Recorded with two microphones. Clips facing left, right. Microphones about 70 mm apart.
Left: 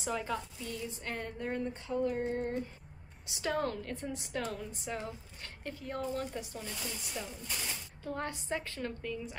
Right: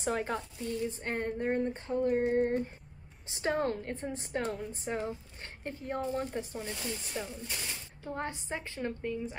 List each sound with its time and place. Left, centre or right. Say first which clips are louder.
0.0 s speech: right 3 dB; right
2.0 s a sound: right 7 dB; right
3.3 s a woman's voice: right 3 dB; right
7.2 s a woman's voice: right 2 dB; centre; by 9.4 s right